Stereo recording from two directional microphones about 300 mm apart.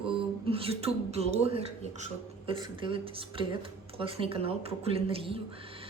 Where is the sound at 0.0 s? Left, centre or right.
Centre.